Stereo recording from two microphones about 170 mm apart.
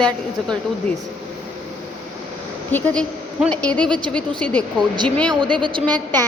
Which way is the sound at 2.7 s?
5° left (ahead or behind).